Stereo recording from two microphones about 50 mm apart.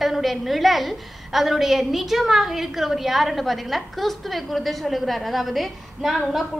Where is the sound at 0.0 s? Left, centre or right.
Centre.